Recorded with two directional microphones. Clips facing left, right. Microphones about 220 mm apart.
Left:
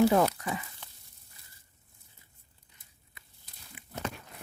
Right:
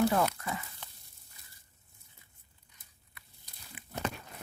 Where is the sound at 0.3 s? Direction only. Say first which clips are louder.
Left 3 dB; 15° left (ahead or behind).